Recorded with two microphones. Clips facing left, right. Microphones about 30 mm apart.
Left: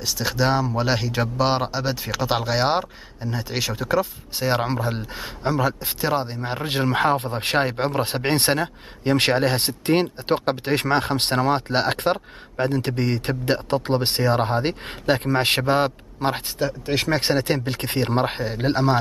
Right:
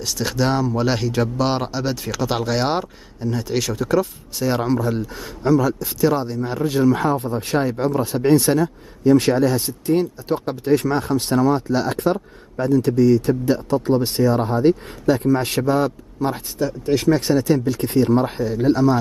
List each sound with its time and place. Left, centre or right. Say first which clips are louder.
0.0 s speech: right 1 dB; centre
4.4 s speech: right 3 dB; left